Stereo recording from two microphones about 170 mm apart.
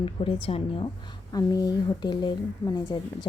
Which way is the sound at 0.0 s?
30° left (ahead or behind).